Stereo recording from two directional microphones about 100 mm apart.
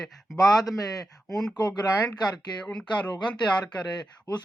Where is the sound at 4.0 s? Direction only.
45° left (ahead or behind).